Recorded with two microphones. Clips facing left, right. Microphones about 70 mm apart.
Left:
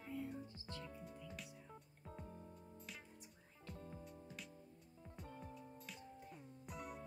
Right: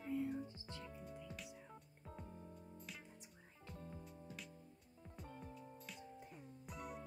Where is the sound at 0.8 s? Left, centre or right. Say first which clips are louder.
Right 1 dB; centre.